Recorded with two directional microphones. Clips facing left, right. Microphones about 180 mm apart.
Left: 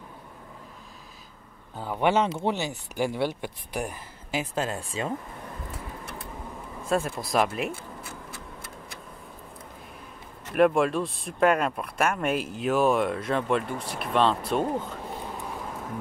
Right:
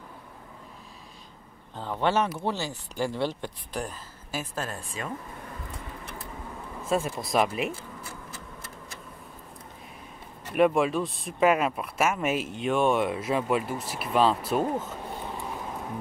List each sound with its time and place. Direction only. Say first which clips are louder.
1.8 s speech: left 2 dB; 10° left (ahead or behind)
6.8 s speech: left 1 dB; centre (ahead or behind)
10.5 s speech: left 1 dB; centre (ahead or behind)